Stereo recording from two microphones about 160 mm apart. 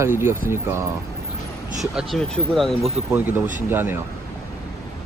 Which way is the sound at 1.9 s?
Centre (ahead or behind).